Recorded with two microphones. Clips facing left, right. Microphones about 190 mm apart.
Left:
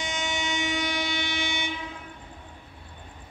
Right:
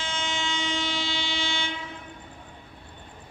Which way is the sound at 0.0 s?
15° left (ahead or behind).